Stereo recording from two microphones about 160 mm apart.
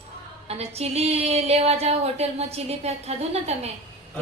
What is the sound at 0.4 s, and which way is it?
A woman's voice, 40° right (ahead or behind).